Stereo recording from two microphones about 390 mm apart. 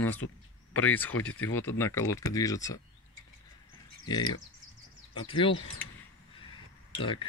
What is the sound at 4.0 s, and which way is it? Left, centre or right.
Speech, centre.